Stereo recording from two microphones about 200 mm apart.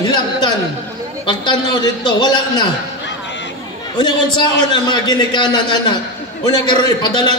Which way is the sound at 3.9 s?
20° left (ahead or behind).